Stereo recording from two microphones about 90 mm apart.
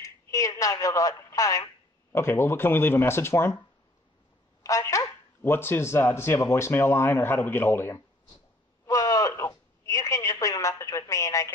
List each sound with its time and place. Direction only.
0.0 s speech: 40° left (ahead or behind)
2.1 s speech: 30° left (ahead or behind)
4.6 s speech: 35° left (ahead or behind)
5.4 s speech: 25° left (ahead or behind)
8.8 s a sound: 40° left (ahead or behind)
9.4 s speech: 35° left (ahead or behind)